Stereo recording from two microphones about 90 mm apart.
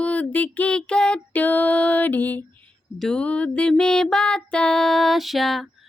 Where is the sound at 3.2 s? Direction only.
15° left (ahead or behind).